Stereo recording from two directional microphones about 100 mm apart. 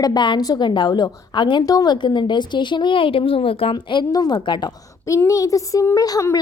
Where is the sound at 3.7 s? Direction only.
45° left (ahead or behind).